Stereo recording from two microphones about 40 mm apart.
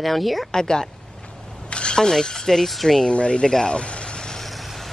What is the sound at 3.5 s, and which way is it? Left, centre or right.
Vehicle, centre.